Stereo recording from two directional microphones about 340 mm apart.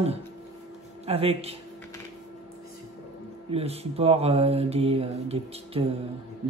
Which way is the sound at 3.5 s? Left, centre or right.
Centre.